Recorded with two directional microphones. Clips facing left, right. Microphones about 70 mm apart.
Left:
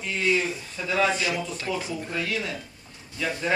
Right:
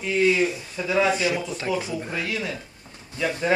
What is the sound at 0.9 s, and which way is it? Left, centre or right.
Speech, centre.